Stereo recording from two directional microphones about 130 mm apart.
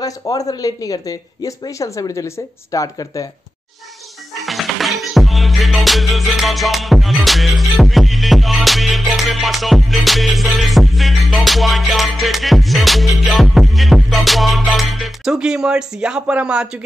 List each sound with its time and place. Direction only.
0.0 s speech: 30° left (ahead or behind)
4.5 s music: centre (ahead or behind)